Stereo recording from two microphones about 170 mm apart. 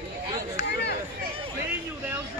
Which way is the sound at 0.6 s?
75° left (ahead or behind).